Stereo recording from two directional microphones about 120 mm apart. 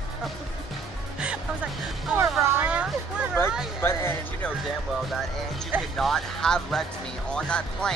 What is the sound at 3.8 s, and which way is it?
Speech, 20° left (ahead or behind).